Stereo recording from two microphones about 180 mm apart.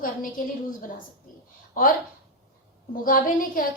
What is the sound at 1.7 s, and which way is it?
Speech, 50° left (ahead or behind).